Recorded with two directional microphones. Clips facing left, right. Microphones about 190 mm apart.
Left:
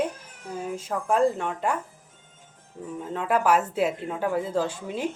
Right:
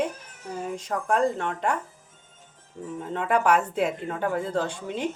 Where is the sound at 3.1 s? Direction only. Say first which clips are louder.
Even; 5° left (ahead or behind).